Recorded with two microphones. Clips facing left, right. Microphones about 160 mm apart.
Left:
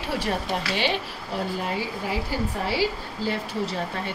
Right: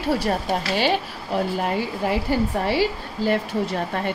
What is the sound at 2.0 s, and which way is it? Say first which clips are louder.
A woman's voice: right 8 dB; 60° right (ahead or behind).